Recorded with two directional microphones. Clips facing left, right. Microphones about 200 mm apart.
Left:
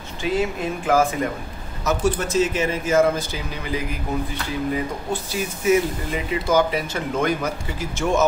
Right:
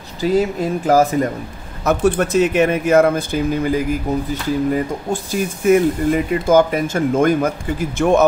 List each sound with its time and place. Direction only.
0.2 s speech: 40° right (ahead or behind)
1.9 s speech: 60° right (ahead or behind)